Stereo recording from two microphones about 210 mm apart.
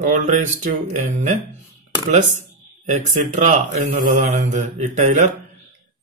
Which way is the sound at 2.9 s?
35° right (ahead or behind).